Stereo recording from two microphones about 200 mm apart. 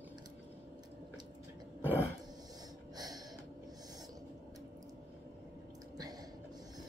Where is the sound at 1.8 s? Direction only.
10° left (ahead or behind).